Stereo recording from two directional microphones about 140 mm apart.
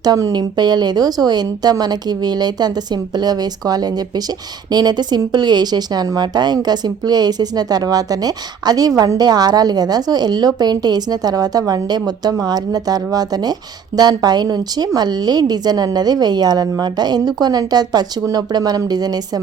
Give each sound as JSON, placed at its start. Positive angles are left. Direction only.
{"t": 0.0, "sound": "a woman's voice", "side_deg": -25}